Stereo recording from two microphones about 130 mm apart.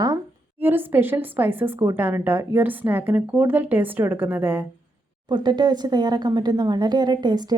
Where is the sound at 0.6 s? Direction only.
15° right (ahead or behind).